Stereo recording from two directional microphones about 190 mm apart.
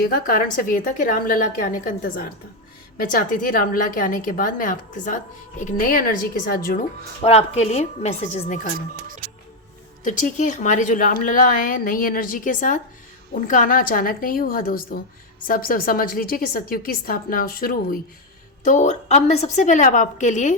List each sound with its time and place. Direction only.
0.0 s a woman's voice: 50° left (ahead or behind)
7.2 s a woman's voice: 30° left (ahead or behind)
10.0 s a woman's voice: 40° left (ahead or behind)
18.6 s a woman's voice: 40° left (ahead or behind)